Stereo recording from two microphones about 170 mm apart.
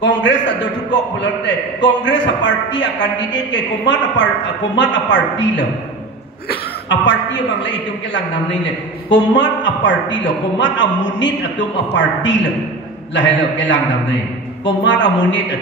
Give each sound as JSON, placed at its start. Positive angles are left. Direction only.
{"t": 0.0, "sound": "a man's voice", "side_deg": 90}